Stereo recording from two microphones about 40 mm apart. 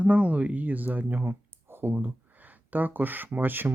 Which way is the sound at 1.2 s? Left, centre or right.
Right.